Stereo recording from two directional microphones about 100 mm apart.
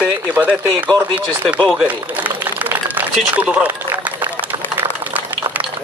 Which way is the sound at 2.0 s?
15° right (ahead or behind).